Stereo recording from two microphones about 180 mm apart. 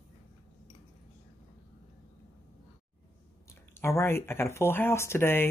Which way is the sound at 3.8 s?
15° left (ahead or behind).